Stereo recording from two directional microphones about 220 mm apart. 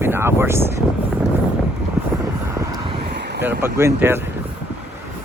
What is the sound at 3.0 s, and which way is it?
Vehicle, 45° right (ahead or behind).